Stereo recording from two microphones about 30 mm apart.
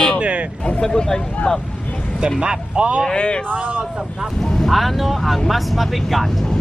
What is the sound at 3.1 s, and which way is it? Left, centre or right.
Speech, left.